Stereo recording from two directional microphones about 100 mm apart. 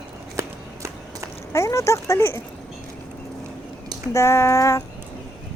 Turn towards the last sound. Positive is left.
turn(degrees=30)  # may be behind; listen again after turning